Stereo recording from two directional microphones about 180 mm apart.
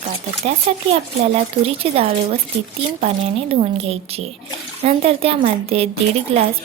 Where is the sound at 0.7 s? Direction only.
35° right (ahead or behind).